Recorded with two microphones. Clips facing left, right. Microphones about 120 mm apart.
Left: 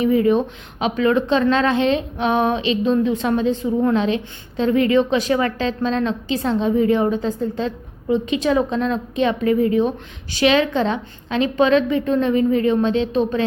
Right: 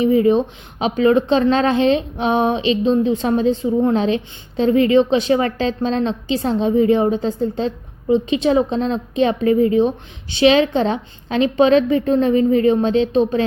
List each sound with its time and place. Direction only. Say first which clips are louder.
0.0 s a woman's voice: right 2 dB; 30° right (ahead or behind)